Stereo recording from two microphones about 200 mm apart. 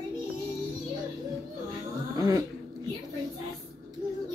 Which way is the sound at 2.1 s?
20° right (ahead or behind).